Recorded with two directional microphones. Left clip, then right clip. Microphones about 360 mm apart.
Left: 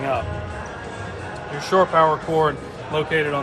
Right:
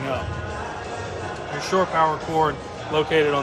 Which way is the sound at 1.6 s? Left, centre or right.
Centre.